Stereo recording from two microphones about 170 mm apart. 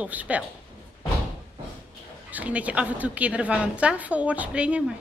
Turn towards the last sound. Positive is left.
turn(degrees=-5)  # may be behind; listen again after turning